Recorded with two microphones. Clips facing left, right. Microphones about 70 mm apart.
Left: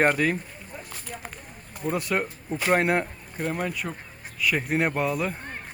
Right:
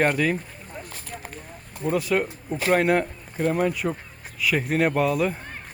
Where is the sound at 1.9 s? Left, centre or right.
Centre.